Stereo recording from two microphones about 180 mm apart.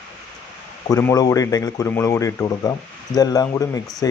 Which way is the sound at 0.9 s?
20° left (ahead or behind).